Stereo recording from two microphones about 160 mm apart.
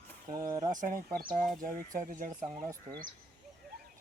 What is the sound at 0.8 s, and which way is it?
Speech, 55° right (ahead or behind).